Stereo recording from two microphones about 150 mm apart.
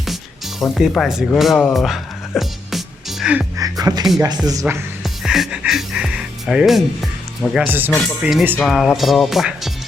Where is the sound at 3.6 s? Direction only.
25° right (ahead or behind).